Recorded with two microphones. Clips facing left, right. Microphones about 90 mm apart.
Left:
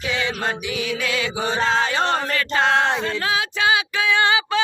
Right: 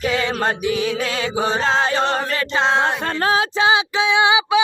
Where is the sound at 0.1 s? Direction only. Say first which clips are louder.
Even; 40° right (ahead or behind).